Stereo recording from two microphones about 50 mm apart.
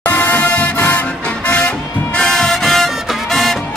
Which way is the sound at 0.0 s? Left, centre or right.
Left.